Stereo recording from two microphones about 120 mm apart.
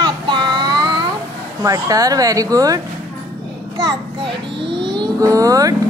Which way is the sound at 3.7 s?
30° right (ahead or behind).